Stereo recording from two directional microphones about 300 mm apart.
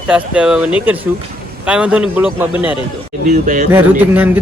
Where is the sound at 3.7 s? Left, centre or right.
Centre.